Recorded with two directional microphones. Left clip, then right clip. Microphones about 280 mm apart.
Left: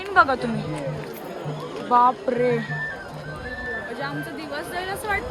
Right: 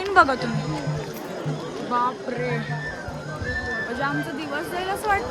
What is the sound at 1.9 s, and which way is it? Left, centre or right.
Speech, centre.